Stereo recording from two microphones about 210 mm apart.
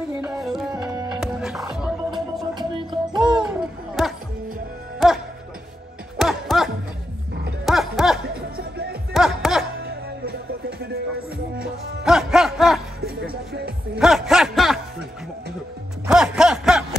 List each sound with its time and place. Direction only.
0.2 s music: centre (ahead or behind)
0.7 s music: 20° right (ahead or behind)
1.2 s music: centre (ahead or behind)
2.9 s music: 20° right (ahead or behind)
3.3 s a sound: centre (ahead or behind)
4.9 s music: centre (ahead or behind)
8.5 s music: 50° right (ahead or behind)
9.1 s music: centre (ahead or behind)
11.5 s music: 5° right (ahead or behind)
13.0 s music: 50° right (ahead or behind)
13.9 s snicker: centre (ahead or behind)
16.1 s music: 5° right (ahead or behind)